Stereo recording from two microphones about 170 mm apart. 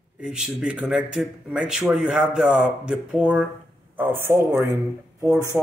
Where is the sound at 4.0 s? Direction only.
10° right (ahead or behind).